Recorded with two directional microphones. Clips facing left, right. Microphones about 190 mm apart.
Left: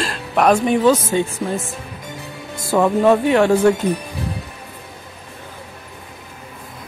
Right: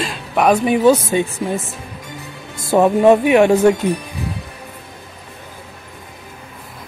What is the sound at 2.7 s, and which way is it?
Speech, 20° right (ahead or behind).